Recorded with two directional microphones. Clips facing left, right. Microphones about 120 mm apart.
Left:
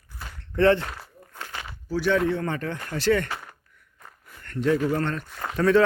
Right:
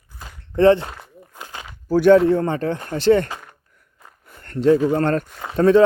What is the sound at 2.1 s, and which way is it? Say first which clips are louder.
A man's voice: right 8 dB; 30° right (ahead or behind).